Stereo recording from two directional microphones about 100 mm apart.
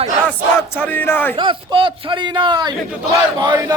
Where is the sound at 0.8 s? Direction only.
20° left (ahead or behind).